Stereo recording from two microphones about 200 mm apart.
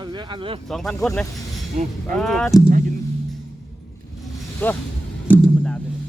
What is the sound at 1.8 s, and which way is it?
Speech, 40° right (ahead or behind).